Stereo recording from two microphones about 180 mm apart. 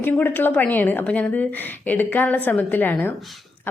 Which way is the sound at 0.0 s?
10° left (ahead or behind).